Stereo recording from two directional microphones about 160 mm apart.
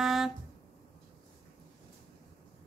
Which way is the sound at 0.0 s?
Centre (ahead or behind).